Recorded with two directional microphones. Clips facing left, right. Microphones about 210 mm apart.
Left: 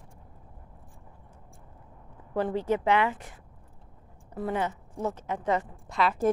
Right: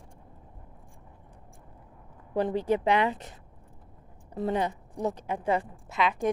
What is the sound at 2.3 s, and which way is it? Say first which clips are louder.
A woman's voice: right 1 dB; 15° right (ahead or behind).